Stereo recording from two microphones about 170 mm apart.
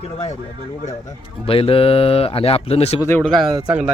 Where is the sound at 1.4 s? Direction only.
35° left (ahead or behind).